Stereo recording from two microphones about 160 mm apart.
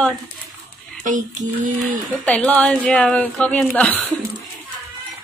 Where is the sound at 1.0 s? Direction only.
50° right (ahead or behind).